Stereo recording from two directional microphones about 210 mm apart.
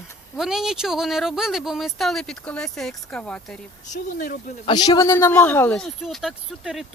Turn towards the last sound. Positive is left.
turn(degrees=0)  # may be behind; listen again after turning